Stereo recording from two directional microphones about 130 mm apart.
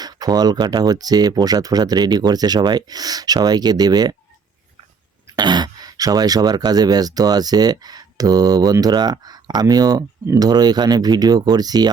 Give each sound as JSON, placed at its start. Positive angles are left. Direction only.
{"t": 0.0, "sound": "speech", "side_deg": -30}
{"t": 5.4, "sound": "speech", "side_deg": -35}